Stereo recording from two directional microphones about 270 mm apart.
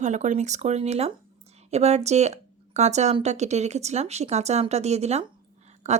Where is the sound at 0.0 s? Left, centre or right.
Right.